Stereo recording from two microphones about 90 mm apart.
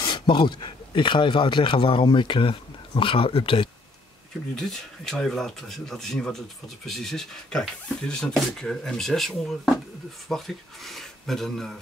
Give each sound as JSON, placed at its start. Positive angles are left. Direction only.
{"t": 0.0, "sound": "speech", "side_deg": 60}
{"t": 4.6, "sound": "speech", "side_deg": 5}